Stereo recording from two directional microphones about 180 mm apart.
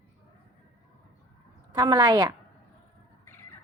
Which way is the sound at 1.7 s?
25° right (ahead or behind).